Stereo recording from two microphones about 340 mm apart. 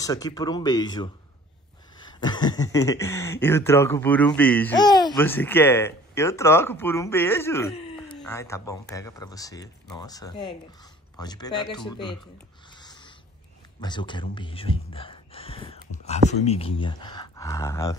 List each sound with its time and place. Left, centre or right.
0.0 s speech: centre
2.1 s speech: centre
12.7 s a sound: centre
13.7 s speech: centre